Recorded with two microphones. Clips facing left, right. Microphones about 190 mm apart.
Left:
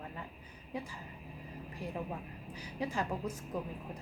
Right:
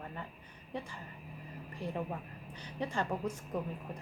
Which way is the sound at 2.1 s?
5° left (ahead or behind).